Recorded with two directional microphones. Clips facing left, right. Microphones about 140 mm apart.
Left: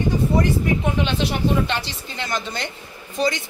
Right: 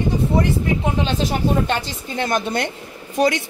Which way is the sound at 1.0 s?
40° right (ahead or behind).